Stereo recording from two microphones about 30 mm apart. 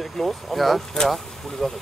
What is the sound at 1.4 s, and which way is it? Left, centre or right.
Speech, centre.